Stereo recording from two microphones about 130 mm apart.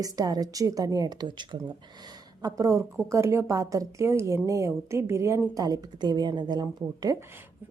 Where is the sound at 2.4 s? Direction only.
25° right (ahead or behind).